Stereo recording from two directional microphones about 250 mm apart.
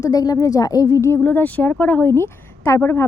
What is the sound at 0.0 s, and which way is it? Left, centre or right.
Speech, centre.